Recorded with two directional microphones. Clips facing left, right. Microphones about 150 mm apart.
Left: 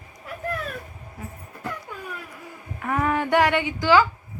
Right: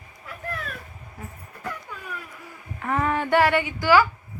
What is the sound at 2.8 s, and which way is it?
Speech, 10° left (ahead or behind).